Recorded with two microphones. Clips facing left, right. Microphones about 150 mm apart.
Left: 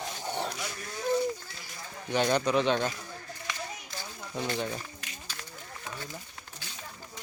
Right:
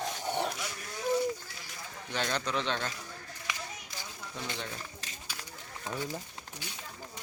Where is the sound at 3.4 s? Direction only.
15° right (ahead or behind).